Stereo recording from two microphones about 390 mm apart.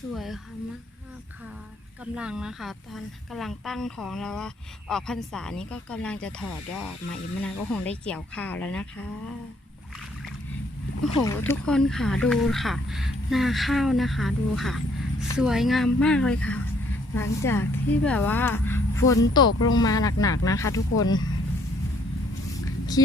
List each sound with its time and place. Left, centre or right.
0.1 s a woman's voice: centre
2.1 s a woman's voice: centre
11.2 s a woman's voice: centre
19.5 s speech: left
19.8 s speech: centre